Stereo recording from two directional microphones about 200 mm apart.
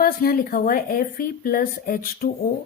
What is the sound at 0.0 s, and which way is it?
A woman's voice, 45° left (ahead or behind).